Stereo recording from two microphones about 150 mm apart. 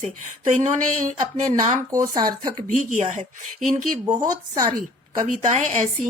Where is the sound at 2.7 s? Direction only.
55° right (ahead or behind).